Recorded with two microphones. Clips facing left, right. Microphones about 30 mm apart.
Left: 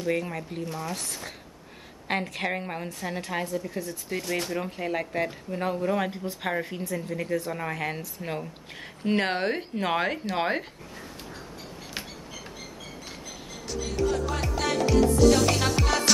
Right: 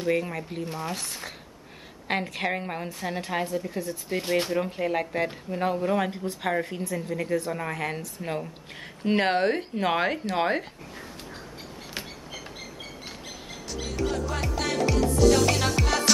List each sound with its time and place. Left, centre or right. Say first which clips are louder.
0.1 s speech: right 2 dB; centre
1.0 s speech: even; right
2.0 s speech: right 1 dB; centre
2.9 s speech: right 3 dB; centre
4.2 s speech: right 5 dB; right
4.5 s speech: right 3 dB; centre
14.1 s music: left 1 dB; centre